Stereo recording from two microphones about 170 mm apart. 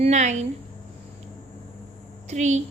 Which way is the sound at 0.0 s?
45° right (ahead or behind).